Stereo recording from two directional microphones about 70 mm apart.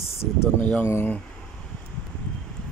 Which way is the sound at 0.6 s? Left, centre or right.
Centre.